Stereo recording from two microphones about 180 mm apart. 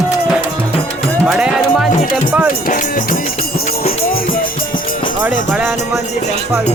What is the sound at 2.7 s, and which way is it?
Speech, 50° left (ahead or behind).